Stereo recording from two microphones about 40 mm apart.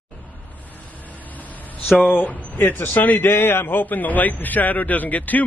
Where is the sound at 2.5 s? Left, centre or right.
Left.